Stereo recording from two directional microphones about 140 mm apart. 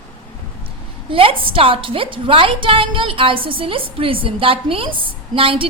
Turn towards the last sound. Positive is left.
turn(degrees=-40)  # may be behind; listen again after turning